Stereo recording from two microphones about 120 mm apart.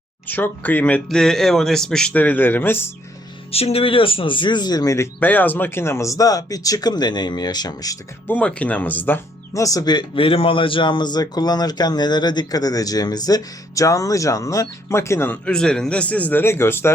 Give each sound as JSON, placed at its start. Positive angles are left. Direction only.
{"t": 0.3, "sound": "speech", "side_deg": 15}
{"t": 3.5, "sound": "speech", "side_deg": 55}
{"t": 5.2, "sound": "speech", "side_deg": 15}
{"t": 8.3, "sound": "speech", "side_deg": 10}
{"t": 9.6, "sound": "speech", "side_deg": 30}
{"t": 15.4, "sound": "speech", "side_deg": 5}